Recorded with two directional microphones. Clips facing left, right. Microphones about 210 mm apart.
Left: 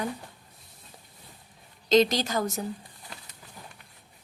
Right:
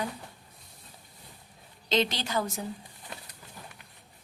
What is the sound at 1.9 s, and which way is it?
Speech, 45° left (ahead or behind).